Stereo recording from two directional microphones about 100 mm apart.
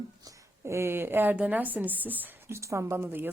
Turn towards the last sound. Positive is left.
turn(degrees=-20)  # may be behind; listen again after turning